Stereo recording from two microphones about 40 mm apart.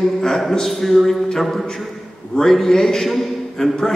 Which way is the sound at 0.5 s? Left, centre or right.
Centre.